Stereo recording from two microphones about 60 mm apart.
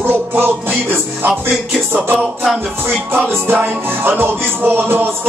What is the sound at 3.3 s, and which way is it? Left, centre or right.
Music, right.